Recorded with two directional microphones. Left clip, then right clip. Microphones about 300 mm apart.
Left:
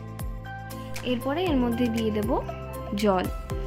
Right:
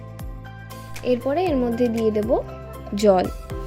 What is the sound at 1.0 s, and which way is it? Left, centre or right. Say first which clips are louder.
Speech: right 6 dB; centre.